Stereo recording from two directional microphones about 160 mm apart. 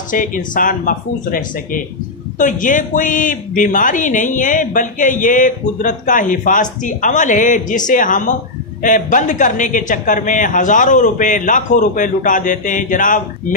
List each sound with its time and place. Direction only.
0.1 s speech: 55° left (ahead or behind)